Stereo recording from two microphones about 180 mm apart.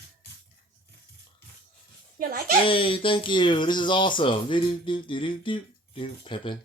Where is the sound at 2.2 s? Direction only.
55° right (ahead or behind).